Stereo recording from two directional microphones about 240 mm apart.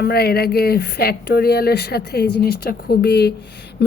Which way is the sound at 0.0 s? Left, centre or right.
Left.